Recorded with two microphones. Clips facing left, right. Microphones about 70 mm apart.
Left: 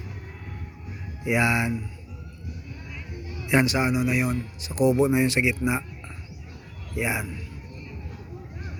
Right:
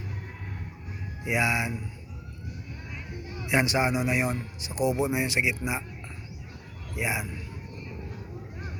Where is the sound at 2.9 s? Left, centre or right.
Centre.